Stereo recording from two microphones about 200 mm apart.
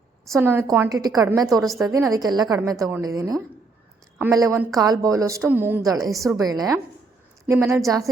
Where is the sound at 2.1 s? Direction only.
20° right (ahead or behind).